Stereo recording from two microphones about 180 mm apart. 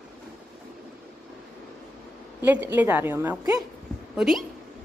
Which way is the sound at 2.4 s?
10° right (ahead or behind).